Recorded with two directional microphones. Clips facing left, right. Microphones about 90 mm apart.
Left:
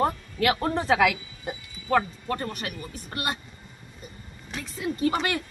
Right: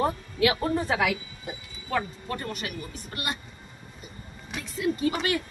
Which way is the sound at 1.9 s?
45° left (ahead or behind).